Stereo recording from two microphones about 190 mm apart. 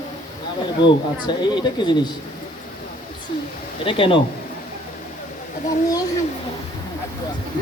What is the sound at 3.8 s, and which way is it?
Speech, 30° left (ahead or behind).